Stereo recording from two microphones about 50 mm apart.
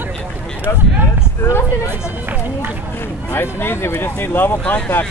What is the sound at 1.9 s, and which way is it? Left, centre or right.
Speech, right.